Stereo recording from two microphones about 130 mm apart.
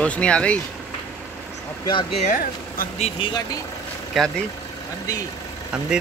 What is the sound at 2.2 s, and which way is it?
Speech, 70° left (ahead or behind).